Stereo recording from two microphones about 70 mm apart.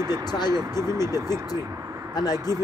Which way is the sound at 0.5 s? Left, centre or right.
Right.